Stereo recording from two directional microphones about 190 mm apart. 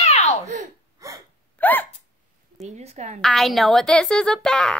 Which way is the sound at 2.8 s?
35° right (ahead or behind).